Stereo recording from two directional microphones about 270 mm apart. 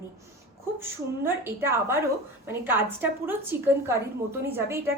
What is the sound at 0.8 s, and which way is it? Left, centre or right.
A woman's voice, centre.